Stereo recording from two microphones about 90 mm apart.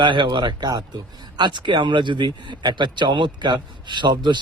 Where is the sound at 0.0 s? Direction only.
60° right (ahead or behind).